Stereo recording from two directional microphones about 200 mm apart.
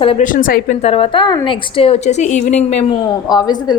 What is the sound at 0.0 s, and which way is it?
Speech, 30° left (ahead or behind).